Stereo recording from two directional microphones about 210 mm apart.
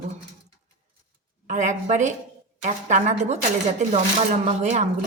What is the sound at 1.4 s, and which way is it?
Speech, 35° right (ahead or behind).